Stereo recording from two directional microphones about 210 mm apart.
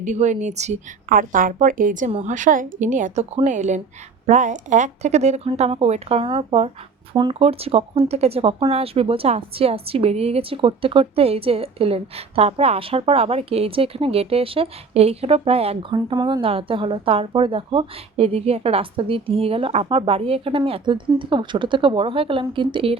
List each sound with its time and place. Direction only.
0.0 s a woman's voice: 35° right (ahead or behind)